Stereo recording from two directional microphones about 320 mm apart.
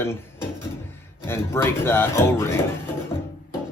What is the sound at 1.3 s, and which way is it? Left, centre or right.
Speech, centre.